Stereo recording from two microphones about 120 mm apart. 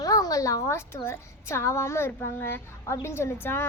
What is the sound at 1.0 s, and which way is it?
Speech, 20° left (ahead or behind).